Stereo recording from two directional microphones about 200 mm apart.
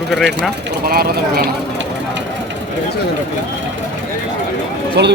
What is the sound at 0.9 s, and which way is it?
Speech, 50° right (ahead or behind).